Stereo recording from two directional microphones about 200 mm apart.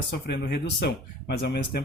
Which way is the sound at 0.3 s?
55° left (ahead or behind).